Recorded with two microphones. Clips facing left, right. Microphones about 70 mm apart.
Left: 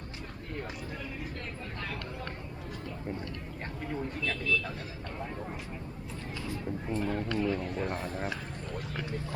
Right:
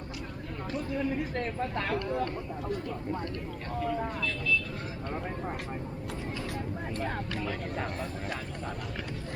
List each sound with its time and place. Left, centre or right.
0.9 s speech: right
6.5 s speech: right
7.9 s a man's voice: left